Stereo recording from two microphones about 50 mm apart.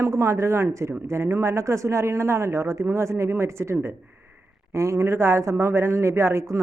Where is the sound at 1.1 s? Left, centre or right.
Right.